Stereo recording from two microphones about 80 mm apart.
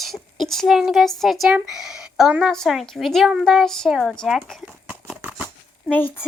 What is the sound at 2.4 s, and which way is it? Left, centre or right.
Speech, centre.